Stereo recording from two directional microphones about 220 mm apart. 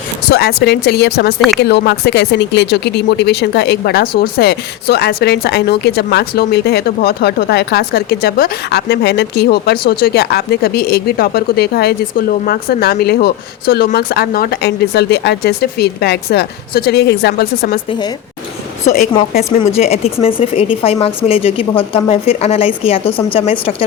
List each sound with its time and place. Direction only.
0.3 s speech: 50° left (ahead or behind)
18.9 s speech: 40° left (ahead or behind)
19.5 s a woman's voice: 30° left (ahead or behind)